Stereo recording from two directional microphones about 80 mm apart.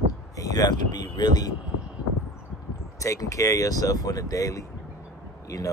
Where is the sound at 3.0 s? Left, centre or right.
Left.